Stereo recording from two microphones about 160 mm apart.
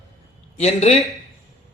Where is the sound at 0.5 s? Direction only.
40° left (ahead or behind).